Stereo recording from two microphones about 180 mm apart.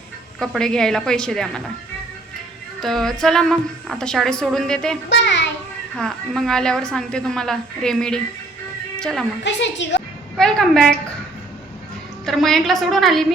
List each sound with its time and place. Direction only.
0.3 s a woman's voice: 5° left (ahead or behind)
2.8 s a woman's voice: centre (ahead or behind)
5.0 s a child's voice: 75° left (ahead or behind)
6.0 s a woman's voice: centre (ahead or behind)
9.4 s a woman's voice: 85° left
10.3 s a woman's voice: centre (ahead or behind)
12.2 s a woman's voice: centre (ahead or behind)